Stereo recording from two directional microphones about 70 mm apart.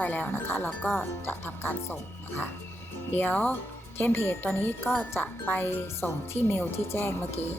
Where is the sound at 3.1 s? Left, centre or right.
Left.